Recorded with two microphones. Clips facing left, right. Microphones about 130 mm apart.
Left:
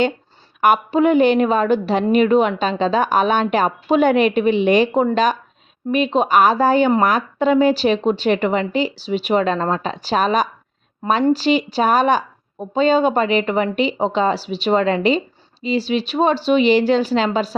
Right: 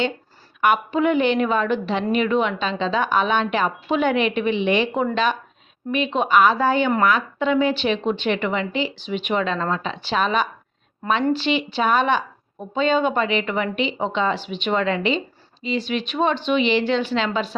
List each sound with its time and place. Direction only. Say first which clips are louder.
0.6 s a woman's voice: left 4 dB; 40° left (ahead or behind)